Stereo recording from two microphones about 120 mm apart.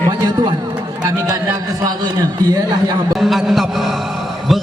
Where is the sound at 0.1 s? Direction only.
35° right (ahead or behind).